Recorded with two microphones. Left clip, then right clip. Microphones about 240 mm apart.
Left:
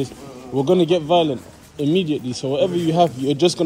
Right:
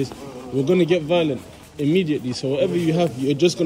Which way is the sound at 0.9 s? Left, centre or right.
Centre.